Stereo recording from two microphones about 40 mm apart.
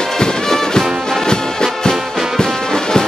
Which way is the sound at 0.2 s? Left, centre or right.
Centre.